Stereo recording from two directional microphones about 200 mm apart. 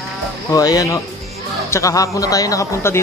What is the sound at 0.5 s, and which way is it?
Speech, 20° left (ahead or behind).